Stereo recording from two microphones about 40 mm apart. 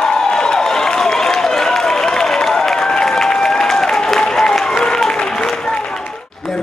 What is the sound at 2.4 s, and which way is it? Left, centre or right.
Applause, centre.